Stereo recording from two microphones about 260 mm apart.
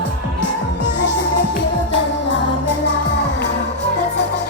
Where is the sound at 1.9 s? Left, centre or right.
Left.